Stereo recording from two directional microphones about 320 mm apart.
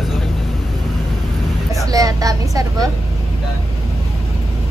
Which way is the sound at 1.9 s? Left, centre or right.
Centre.